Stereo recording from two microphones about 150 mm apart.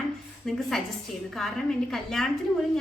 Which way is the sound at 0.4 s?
Centre (ahead or behind).